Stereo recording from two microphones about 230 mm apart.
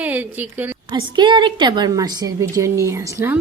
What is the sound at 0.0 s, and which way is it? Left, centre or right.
Speech, centre.